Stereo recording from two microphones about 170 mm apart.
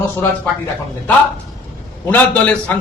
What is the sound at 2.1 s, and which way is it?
Speech, 10° left (ahead or behind).